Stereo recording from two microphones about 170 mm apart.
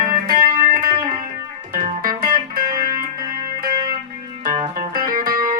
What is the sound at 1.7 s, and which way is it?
Music, 55° right (ahead or behind).